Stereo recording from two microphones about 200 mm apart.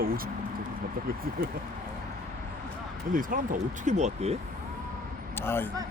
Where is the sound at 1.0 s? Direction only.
50° right (ahead or behind).